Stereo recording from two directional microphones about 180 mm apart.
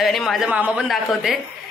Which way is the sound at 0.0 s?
Centre (ahead or behind).